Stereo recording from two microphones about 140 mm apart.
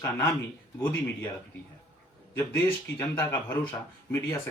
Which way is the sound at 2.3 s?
15° left (ahead or behind).